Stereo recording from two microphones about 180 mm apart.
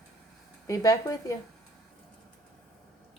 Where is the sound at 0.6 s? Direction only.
20° left (ahead or behind).